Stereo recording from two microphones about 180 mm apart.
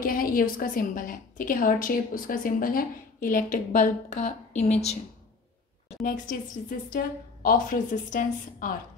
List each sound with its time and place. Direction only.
0.0 s a woman's voice: 55° left (ahead or behind)
6.0 s a woman's voice: 45° left (ahead or behind)